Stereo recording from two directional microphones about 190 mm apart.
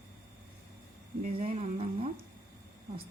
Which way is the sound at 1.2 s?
35° right (ahead or behind).